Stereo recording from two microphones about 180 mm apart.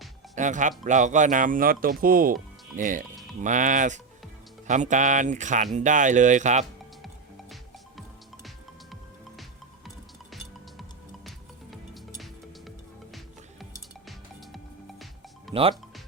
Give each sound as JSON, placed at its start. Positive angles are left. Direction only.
{"t": 0.3, "sound": "speech", "side_deg": -45}
{"t": 11.3, "sound": "music", "side_deg": 0}
{"t": 14.1, "sound": "music", "side_deg": 0}